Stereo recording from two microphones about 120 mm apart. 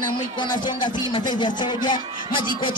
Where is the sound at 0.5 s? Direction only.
35° left (ahead or behind).